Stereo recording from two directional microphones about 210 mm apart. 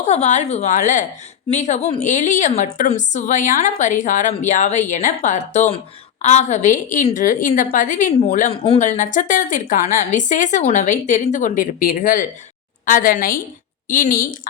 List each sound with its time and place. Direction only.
0.0 s a woman's voice: 30° left (ahead or behind)